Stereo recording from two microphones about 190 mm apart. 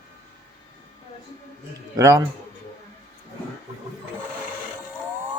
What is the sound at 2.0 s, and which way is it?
Speech, 15° right (ahead or behind).